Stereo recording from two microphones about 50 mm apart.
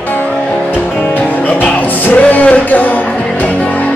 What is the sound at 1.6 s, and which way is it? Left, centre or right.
Music, left.